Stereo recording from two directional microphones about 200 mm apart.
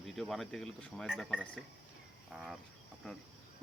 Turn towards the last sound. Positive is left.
turn(degrees=0)  # may be behind; listen again after turning